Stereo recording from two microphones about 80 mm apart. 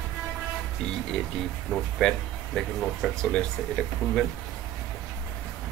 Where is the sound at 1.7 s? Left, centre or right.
Centre.